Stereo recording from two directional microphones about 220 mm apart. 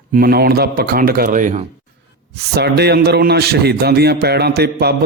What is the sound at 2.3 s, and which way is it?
A man's voice, 50° right (ahead or behind).